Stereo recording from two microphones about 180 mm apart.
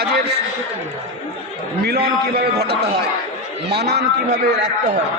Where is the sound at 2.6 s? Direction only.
65° right (ahead or behind).